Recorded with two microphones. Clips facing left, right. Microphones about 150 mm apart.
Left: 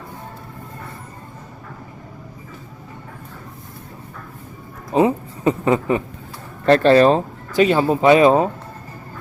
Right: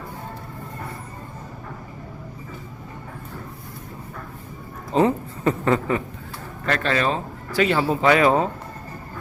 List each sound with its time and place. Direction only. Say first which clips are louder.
4.9 s a sound: left 3 dB; 15° left (ahead or behind)
6.7 s speech: left 11 dB; 35° left (ahead or behind)
7.5 s speech: left 5 dB; 20° left (ahead or behind)